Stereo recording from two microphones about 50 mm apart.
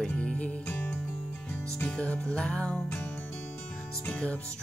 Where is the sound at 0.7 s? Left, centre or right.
Left.